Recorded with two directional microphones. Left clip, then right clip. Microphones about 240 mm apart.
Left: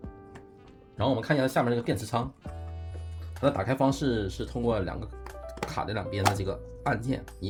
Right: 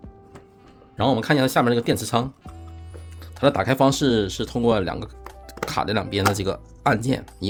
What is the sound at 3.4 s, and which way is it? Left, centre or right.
Speech, right.